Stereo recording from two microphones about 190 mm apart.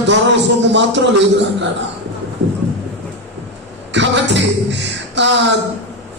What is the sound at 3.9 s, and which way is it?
Beatboxing, 70° right (ahead or behind).